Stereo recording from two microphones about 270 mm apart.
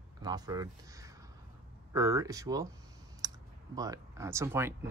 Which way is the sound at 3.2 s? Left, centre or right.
Centre.